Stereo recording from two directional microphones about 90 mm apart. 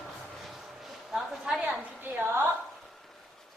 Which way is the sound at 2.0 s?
20° right (ahead or behind).